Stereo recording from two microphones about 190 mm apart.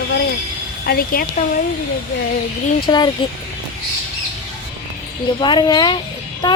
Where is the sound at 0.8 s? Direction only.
55° left (ahead or behind).